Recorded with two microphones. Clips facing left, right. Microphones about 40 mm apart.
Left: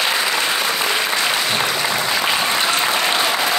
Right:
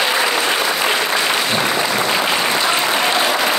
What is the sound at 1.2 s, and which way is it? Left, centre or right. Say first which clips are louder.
Applause: right 2 dB; centre.